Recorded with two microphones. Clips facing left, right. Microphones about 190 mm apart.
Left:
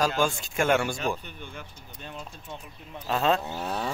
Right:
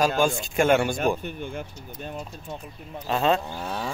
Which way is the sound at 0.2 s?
20° right (ahead or behind).